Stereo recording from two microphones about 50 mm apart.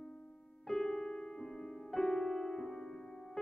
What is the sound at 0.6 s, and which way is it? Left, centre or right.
Music, centre.